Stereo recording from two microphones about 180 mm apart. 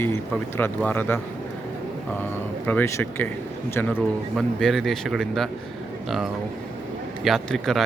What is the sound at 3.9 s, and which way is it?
Speech, centre (ahead or behind).